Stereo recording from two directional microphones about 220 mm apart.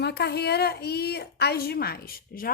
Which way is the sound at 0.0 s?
50° left (ahead or behind).